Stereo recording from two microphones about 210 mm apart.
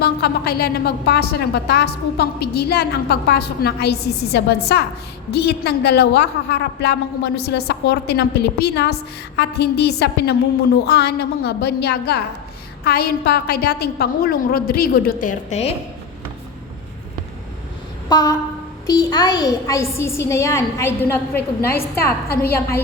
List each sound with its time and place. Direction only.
0.0 s a woman's voice: 50° left (ahead or behind); by 15.7 s 30° left (ahead or behind)
18.1 s a woman's voice: 15° left (ahead or behind)